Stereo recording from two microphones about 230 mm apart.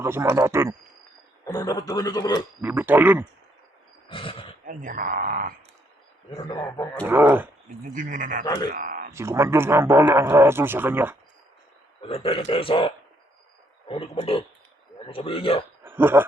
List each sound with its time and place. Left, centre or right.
0.0 s speech: centre
1.5 s a man's voice: centre
2.6 s speech: centre
4.1 s speech: left
4.6 s speech: right
6.3 s a man's voice: centre
7.0 s speech: centre
7.9 s speech: right
8.4 s a man's voice: centre
8.7 s a sound: right
9.1 s speech: centre
12.0 s a man's voice: left
15.8 s a sound: centre